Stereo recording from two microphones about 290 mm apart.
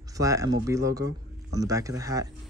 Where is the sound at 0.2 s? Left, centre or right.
Centre.